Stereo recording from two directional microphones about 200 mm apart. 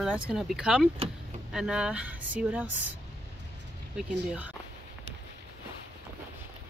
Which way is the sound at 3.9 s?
5° right (ahead or behind).